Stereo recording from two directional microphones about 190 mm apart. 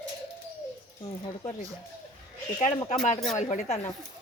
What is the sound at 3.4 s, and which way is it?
Speech, 35° left (ahead or behind).